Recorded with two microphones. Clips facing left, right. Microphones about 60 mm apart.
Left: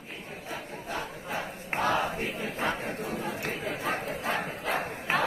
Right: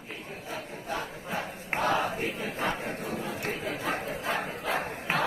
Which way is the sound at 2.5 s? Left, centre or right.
Left.